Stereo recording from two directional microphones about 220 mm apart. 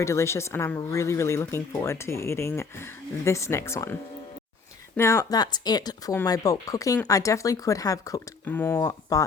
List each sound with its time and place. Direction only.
0.0 s speech: 15° left (ahead or behind)
4.9 s speech: 15° left (ahead or behind)